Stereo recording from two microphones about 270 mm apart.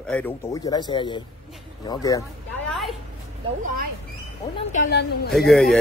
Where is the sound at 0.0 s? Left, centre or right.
Centre.